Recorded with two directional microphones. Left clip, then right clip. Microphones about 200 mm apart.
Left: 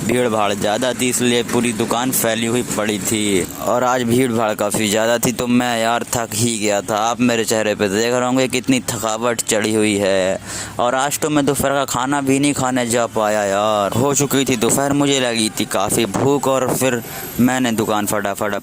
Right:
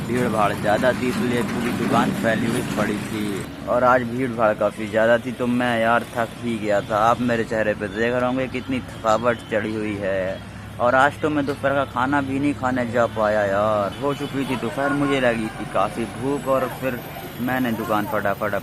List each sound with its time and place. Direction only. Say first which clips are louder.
0.2 s speech: left 2 dB; 55° left (ahead or behind)
3.7 s speech: left 1 dB; 55° left (ahead or behind)
6.7 s speech: right 1 dB; 50° left (ahead or behind); by 8.8 s 65° left (ahead or behind)
9.0 s speech: right 1 dB; 50° left (ahead or behind)